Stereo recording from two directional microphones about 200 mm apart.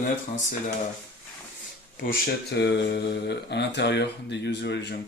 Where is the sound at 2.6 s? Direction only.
60° left (ahead or behind).